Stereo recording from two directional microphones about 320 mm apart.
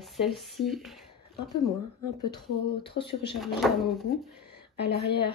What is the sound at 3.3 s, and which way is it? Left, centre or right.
Speech, centre.